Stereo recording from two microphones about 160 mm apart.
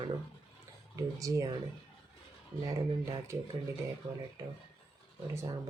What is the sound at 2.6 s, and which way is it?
Speech, 20° right (ahead or behind).